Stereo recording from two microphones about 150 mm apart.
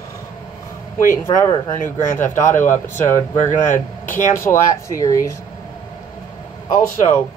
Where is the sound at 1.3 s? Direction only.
35° left (ahead or behind).